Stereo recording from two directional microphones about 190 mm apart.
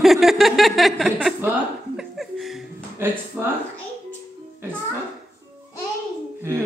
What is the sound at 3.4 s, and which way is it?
Speech, 10° right (ahead or behind).